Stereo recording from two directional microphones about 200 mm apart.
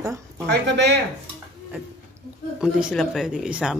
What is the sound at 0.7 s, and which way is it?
Speech, 55° right (ahead or behind).